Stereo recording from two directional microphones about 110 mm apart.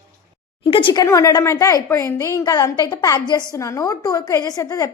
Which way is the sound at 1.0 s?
30° left (ahead or behind).